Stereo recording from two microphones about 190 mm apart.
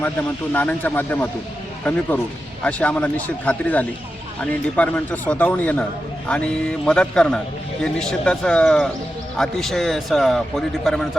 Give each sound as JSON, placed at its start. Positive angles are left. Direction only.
{"t": 0.0, "sound": "a man's voice", "side_deg": 10}